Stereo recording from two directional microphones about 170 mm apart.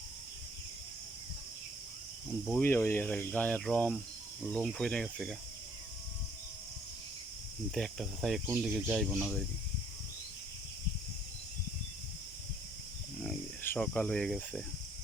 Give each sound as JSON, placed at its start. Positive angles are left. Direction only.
{"t": 2.6, "sound": "speech", "side_deg": 10}
{"t": 7.7, "sound": "speech", "side_deg": 0}
{"t": 13.6, "sound": "speech", "side_deg": 10}